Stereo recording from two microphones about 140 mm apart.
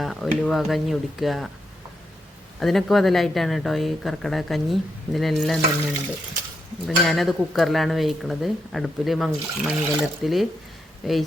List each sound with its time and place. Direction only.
0.0 s a sound: centre (ahead or behind)
0.4 s speech: centre (ahead or behind)
2.6 s speech: centre (ahead or behind)
6.8 s speech: centre (ahead or behind)